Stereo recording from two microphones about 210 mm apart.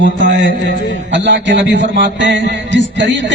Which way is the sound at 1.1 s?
60° right (ahead or behind).